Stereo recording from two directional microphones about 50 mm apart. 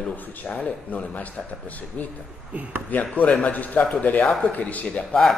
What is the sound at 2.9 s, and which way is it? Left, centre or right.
A man's voice, left.